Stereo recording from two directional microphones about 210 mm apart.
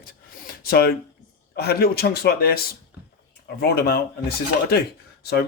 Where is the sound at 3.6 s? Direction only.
50° left (ahead or behind).